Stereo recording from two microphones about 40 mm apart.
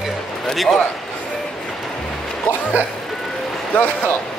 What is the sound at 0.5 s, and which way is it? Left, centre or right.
Speech, centre.